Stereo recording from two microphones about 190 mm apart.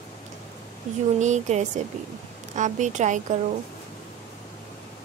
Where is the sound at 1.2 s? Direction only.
40° right (ahead or behind).